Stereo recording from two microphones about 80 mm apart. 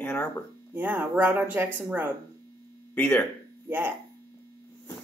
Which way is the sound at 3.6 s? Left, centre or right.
Right.